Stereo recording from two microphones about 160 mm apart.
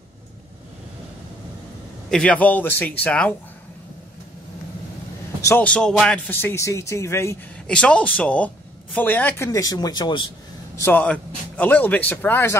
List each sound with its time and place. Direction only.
2.0 s speech: 5° left (ahead or behind)
5.4 s speech: 10° left (ahead or behind)
7.6 s a man's voice: 5° left (ahead or behind); by 10.3 s 30° left (ahead or behind)
10.8 s speech: 10° left (ahead or behind)